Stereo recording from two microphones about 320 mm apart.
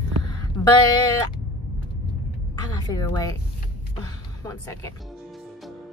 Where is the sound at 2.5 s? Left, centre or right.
Centre.